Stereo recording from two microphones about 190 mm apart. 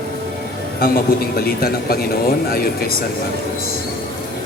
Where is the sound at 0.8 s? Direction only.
50° left (ahead or behind).